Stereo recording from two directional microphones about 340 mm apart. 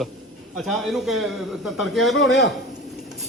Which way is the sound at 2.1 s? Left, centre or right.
Left.